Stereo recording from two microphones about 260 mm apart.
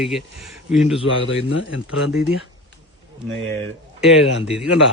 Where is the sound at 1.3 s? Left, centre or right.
Left.